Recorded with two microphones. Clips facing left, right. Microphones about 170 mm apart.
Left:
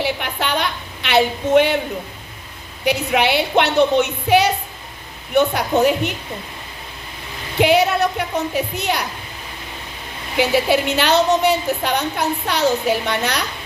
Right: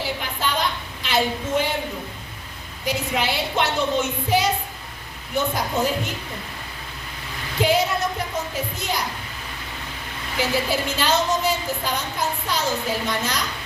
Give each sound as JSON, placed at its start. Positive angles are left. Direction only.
{"t": 0.0, "sound": "a woman's voice", "side_deg": 70}
{"t": 2.8, "sound": "a woman's voice", "side_deg": 70}
{"t": 7.6, "sound": "a woman's voice", "side_deg": 70}
{"t": 10.3, "sound": "a woman's voice", "side_deg": 70}